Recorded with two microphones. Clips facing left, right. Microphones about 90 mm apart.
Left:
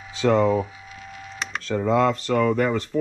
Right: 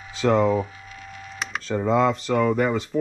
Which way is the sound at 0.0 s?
Centre (ahead or behind).